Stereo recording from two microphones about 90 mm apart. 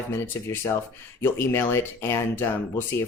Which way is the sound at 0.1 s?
30° left (ahead or behind).